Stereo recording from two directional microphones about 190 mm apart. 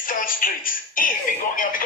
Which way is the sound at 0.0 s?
45° left (ahead or behind).